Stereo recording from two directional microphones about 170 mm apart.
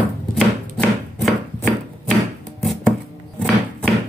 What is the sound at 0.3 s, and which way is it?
Chopping, 5° left (ahead or behind).